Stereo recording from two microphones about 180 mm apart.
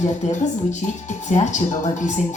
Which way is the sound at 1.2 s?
40° left (ahead or behind).